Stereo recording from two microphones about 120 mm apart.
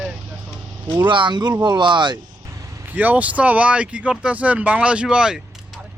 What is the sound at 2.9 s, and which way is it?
Speech, 15° right (ahead or behind).